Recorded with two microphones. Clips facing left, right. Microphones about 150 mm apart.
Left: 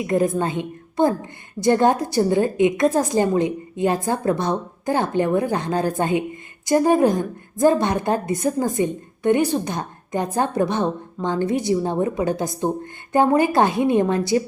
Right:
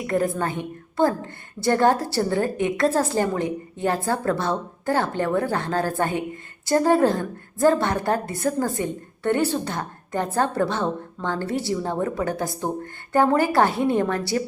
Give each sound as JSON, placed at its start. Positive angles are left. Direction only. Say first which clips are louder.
{"t": 0.1, "sound": "a woman's voice", "louder": "left 3 dB", "side_deg": 20}